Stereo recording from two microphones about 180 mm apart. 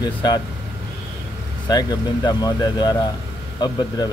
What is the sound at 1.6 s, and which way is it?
Speech, 20° left (ahead or behind).